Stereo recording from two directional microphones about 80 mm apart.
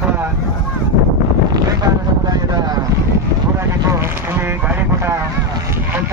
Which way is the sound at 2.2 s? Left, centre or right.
Right.